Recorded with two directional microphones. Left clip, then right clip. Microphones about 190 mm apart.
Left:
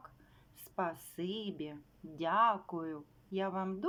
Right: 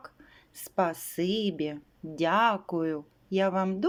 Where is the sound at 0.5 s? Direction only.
20° right (ahead or behind).